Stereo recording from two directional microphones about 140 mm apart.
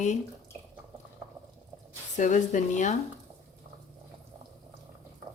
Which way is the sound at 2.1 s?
60° left (ahead or behind).